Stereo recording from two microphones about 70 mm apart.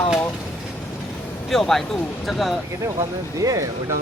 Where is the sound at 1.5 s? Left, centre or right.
Centre.